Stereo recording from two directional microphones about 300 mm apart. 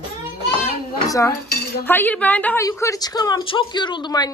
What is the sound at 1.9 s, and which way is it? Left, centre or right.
Speech, centre.